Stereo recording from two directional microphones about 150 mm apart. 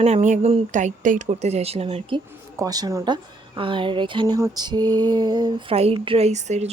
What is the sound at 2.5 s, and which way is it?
Female singing, 25° right (ahead or behind).